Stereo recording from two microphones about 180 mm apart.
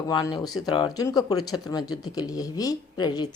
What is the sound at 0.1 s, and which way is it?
A woman's voice, 20° left (ahead or behind).